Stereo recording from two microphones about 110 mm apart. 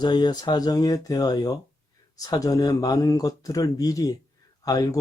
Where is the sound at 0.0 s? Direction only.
40° left (ahead or behind).